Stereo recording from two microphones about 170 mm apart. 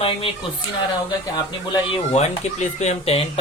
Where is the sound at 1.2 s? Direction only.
25° left (ahead or behind).